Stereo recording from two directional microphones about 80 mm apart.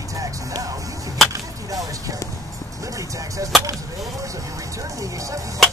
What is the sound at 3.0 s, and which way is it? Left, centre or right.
Speech, right.